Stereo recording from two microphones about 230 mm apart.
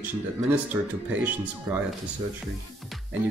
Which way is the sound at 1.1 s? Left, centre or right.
Centre.